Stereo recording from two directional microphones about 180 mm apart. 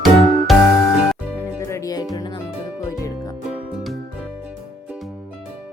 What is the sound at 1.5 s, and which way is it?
Music, 15° left (ahead or behind).